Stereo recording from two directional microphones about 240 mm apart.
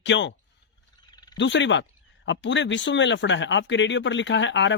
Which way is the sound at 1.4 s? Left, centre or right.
Left.